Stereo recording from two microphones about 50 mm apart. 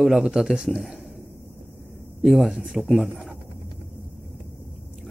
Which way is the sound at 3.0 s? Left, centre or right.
Centre.